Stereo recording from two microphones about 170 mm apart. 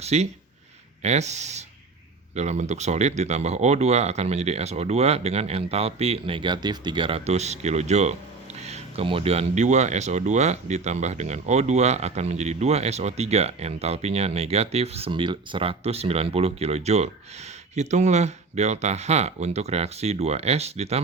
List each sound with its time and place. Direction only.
0.0 s speech: 40° right (ahead or behind)